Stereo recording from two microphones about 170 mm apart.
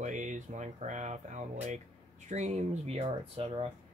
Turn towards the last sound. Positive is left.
turn(degrees=-35)  # may be behind; listen again after turning